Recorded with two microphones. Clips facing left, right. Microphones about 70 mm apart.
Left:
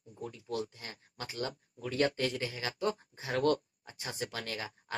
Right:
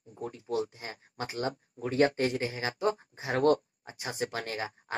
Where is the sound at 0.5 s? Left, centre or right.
Right.